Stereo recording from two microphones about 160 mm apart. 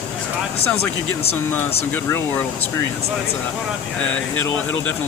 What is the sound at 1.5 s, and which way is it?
Speech, 10° left (ahead or behind).